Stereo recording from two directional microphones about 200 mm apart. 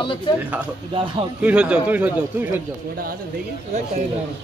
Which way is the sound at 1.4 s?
5° right (ahead or behind).